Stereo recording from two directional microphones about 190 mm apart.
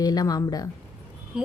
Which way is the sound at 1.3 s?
5° right (ahead or behind).